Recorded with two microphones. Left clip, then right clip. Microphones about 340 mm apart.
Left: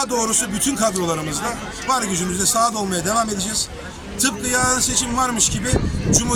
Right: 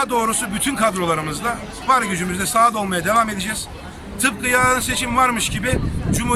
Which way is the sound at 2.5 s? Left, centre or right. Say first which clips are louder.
Right 4 dB; centre.